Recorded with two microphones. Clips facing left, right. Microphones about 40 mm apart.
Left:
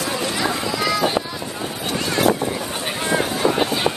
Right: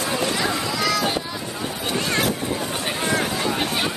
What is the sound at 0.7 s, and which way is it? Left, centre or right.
Boat, centre.